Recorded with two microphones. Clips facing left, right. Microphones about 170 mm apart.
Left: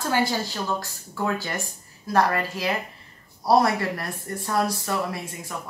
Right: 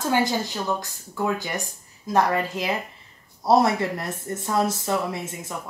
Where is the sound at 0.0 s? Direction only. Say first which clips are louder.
Right 1 dB; 20° right (ahead or behind).